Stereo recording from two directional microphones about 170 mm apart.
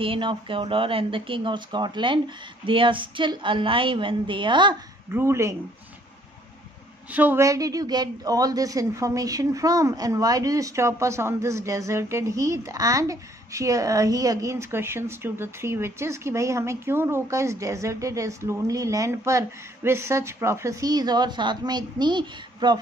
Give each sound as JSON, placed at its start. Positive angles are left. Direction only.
{"t": 0.0, "sound": "a woman's voice", "side_deg": -30}
{"t": 5.1, "sound": "speech", "side_deg": -15}
{"t": 7.1, "sound": "a woman's voice", "side_deg": -10}